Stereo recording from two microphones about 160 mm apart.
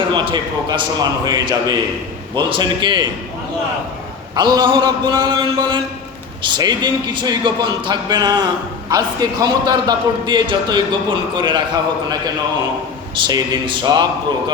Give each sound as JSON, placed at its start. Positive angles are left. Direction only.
{"t": 0.1, "sound": "a man's voice", "side_deg": -30}
{"t": 4.4, "sound": "a man's voice", "side_deg": -25}
{"t": 13.1, "sound": "a man's voice", "side_deg": -25}